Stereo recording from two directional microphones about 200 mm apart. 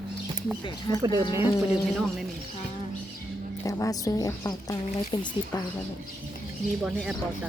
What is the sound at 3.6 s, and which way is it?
Speech, 15° left (ahead or behind).